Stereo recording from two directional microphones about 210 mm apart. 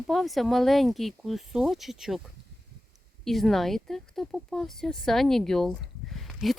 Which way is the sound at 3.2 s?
Centre (ahead or behind).